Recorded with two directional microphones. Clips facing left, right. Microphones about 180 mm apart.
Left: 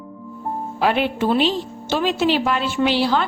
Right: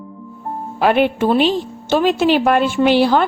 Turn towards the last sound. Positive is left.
turn(degrees=-50)  # may be behind; listen again after turning